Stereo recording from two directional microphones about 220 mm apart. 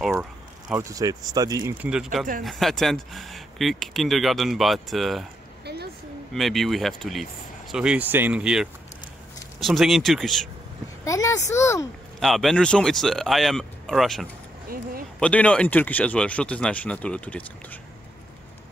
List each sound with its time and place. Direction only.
0.1 s speech: 10° right (ahead or behind)
6.3 s speech: centre (ahead or behind)
11.1 s speech: 15° left (ahead or behind)
12.2 s speech: centre (ahead or behind)